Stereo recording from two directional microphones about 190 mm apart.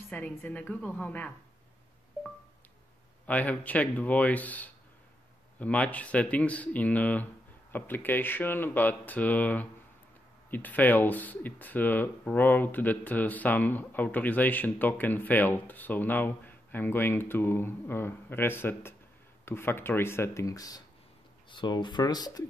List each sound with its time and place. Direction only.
0.1 s speech: 10° left (ahead or behind)
3.3 s speech: 10° left (ahead or behind)